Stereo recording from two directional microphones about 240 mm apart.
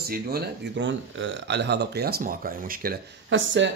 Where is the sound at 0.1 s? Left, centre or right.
Right.